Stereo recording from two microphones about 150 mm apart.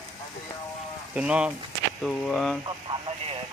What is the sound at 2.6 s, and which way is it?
Radio, 35° right (ahead or behind).